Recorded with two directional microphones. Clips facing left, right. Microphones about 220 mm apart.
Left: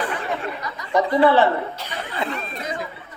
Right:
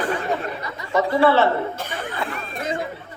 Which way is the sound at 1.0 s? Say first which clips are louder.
Left 1 dB; 20° left (ahead or behind).